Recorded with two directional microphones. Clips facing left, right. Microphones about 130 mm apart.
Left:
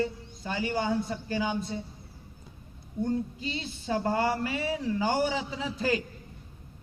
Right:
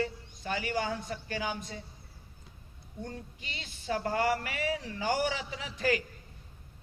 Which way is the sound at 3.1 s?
30° left (ahead or behind).